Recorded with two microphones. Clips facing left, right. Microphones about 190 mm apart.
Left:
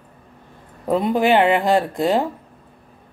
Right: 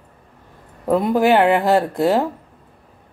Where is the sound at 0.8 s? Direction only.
5° right (ahead or behind).